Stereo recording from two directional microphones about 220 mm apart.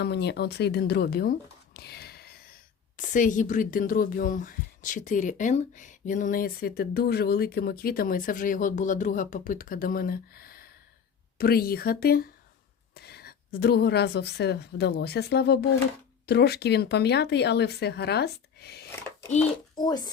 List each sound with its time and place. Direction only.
0.0 s a woman's voice: 50° left (ahead or behind)
18.9 s a sound: 10° left (ahead or behind)
19.7 s speech: 20° left (ahead or behind)